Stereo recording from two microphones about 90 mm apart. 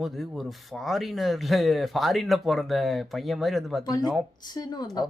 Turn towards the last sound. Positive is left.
turn(degrees=50)  # may be behind; listen again after turning